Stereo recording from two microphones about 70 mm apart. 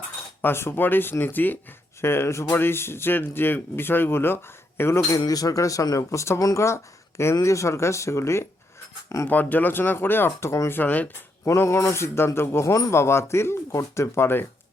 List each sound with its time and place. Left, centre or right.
0.4 s speech: left
5.2 s speech: left
9.2 s speech: left
10.7 s speech: left
11.4 s speech: left